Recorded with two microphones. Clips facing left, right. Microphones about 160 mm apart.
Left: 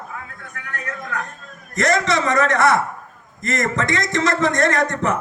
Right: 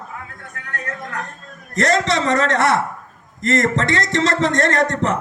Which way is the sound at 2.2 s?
70° right (ahead or behind).